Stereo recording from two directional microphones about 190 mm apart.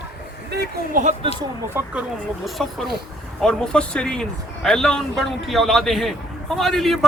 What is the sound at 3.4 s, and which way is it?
Speech, 5° left (ahead or behind).